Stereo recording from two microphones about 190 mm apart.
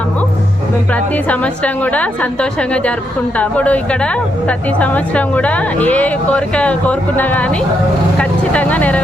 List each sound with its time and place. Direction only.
0.9 s a woman's voice: 5° left (ahead or behind)
8.2 s vehicle: 5° left (ahead or behind)